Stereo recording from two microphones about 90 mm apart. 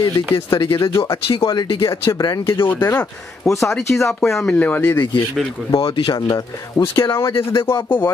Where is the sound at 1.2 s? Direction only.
90° left.